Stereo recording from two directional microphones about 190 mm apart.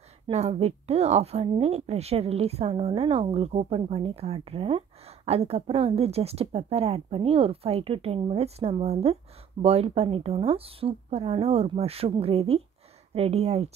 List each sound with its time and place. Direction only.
0.3 s a woman's voice: 35° right (ahead or behind)